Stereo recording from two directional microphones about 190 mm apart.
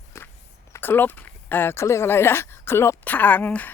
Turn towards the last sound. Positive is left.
turn(degrees=10)  # may be behind; listen again after turning